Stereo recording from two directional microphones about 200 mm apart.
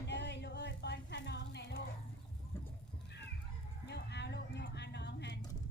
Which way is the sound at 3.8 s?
55° left (ahead or behind).